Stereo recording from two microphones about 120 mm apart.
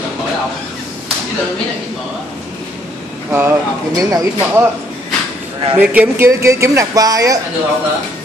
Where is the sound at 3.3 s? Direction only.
20° right (ahead or behind).